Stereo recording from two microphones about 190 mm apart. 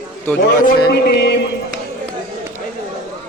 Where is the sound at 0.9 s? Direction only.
60° left (ahead or behind).